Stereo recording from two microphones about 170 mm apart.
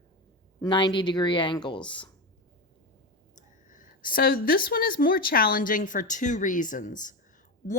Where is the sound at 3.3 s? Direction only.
50° left (ahead or behind).